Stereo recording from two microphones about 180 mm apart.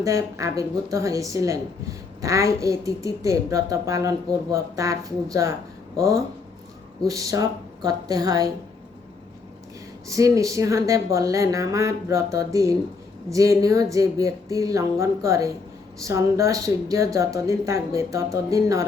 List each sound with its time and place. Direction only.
0.0 s a woman's voice: 15° right (ahead or behind)
10.1 s a woman's voice: 20° right (ahead or behind)